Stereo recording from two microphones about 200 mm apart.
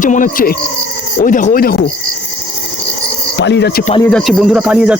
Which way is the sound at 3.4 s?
60° left (ahead or behind).